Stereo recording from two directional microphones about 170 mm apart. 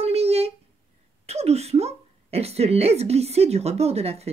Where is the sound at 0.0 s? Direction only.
35° right (ahead or behind).